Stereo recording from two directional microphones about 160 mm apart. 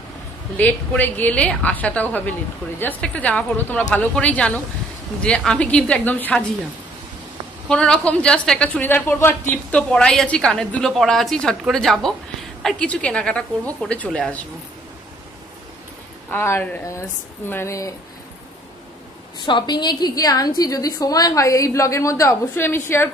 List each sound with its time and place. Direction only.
0.6 s a woman's voice: 10° left (ahead or behind)
7.6 s a woman's voice: 5° left (ahead or behind)
16.3 s a woman's voice: 15° left (ahead or behind)
19.4 s a woman's voice: 30° left (ahead or behind)